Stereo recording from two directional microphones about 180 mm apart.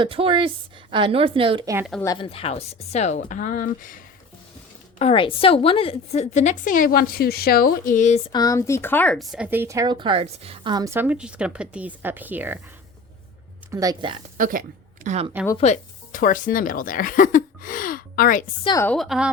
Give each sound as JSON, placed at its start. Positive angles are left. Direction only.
{"t": 0.0, "sound": "speech", "side_deg": -30}
{"t": 2.1, "sound": "speech", "side_deg": 30}
{"t": 4.9, "sound": "a woman's voice", "side_deg": 30}
{"t": 8.3, "sound": "speech", "side_deg": 20}
{"t": 13.7, "sound": "speech", "side_deg": -20}
{"t": 14.3, "sound": "a woman's voice", "side_deg": -50}
{"t": 15.5, "sound": "speech", "side_deg": 40}
{"t": 18.8, "sound": "a woman's voice", "side_deg": 5}